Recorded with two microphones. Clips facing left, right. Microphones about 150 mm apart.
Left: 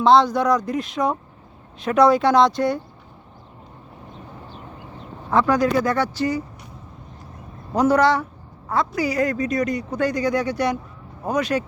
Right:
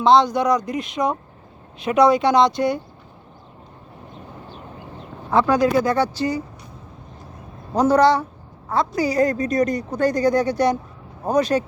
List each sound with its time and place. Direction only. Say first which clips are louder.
0.0 s speech: even; 5° left (ahead or behind)
5.3 s speech: right 1 dB; 30° right (ahead or behind)
7.8 s speech: right 2 dB; 35° right (ahead or behind)